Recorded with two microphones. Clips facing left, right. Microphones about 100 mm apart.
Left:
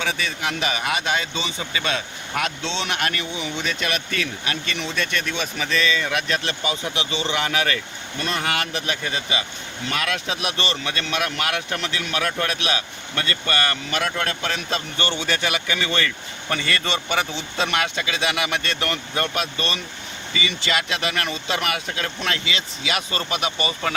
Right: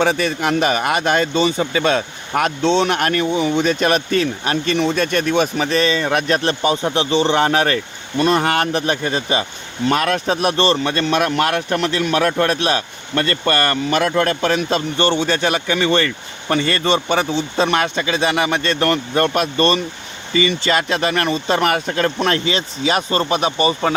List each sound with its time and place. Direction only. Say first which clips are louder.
0.0 s speech: right 9 dB; 50° right (ahead or behind)
14.9 s speech: right 8 dB; 30° right (ahead or behind)